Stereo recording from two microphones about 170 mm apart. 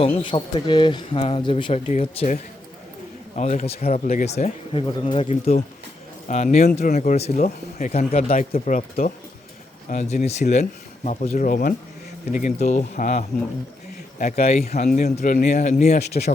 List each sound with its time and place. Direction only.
0.0 s speech: 30° left (ahead or behind)
1.9 s speech: 40° left (ahead or behind)
14.3 s speech: 40° left (ahead or behind)